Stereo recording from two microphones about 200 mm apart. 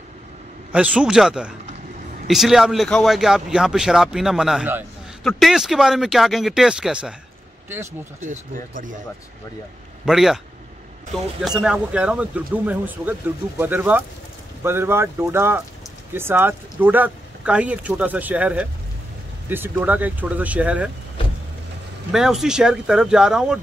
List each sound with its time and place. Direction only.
0.7 s a man's voice: 5° right (ahead or behind)
8.2 s speech: 40° right (ahead or behind)
10.0 s a man's voice: centre (ahead or behind)
11.4 s a man's voice: 5° right (ahead or behind)
22.1 s a man's voice: centre (ahead or behind)